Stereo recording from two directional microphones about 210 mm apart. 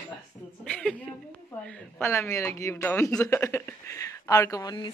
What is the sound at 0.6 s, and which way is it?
A woman's voice, 5° left (ahead or behind).